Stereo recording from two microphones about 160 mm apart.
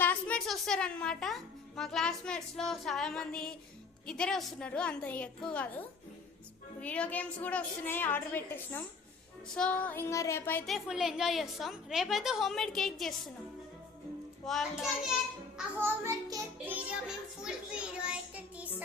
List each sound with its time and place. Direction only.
0.0 s a child's voice: 10° left (ahead or behind)
6.8 s a woman's voice: 10° left (ahead or behind)
10.7 s a woman's voice: centre (ahead or behind)
14.4 s a woman's voice: centre (ahead or behind)
16.0 s music: 20° right (ahead or behind)
17.4 s a child's voice: 5° right (ahead or behind)